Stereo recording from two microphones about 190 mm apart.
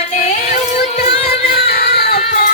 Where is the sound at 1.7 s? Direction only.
55° left (ahead or behind).